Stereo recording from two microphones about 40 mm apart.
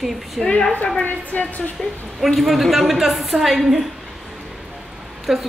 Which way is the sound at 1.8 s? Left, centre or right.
Centre.